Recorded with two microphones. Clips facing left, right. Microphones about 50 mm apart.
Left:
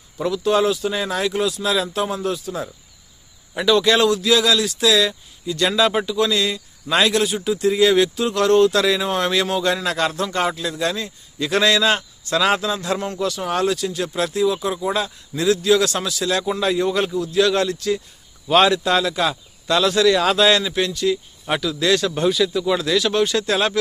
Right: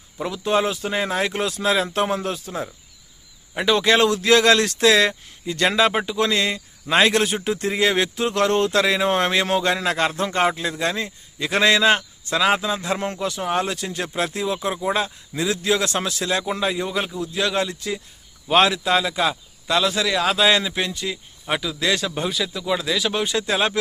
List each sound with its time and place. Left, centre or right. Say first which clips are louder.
0.2 s a man's voice: left 3 dB; centre
17.2 s speech: left 5 dB; centre
20.5 s speech: left 2 dB; centre